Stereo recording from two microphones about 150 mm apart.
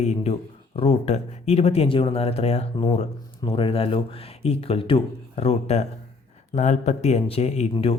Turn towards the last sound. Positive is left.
turn(degrees=40)  # may be behind; listen again after turning